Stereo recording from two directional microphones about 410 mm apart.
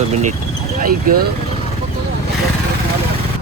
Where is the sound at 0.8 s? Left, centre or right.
Right.